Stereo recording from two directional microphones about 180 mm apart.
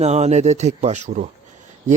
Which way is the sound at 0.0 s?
40° right (ahead or behind).